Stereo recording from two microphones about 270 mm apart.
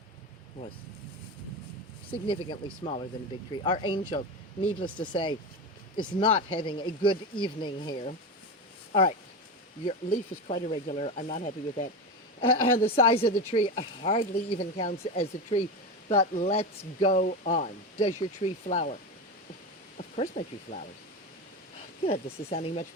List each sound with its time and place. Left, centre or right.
2.2 s speech: centre
13.0 s speech: left
20.0 s speech: left
22.0 s speech: left